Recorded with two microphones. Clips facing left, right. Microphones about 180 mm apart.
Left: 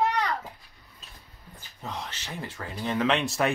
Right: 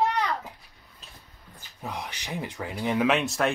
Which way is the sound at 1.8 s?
10° right (ahead or behind).